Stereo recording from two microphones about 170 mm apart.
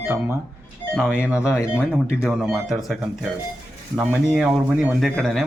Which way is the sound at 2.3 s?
Centre (ahead or behind).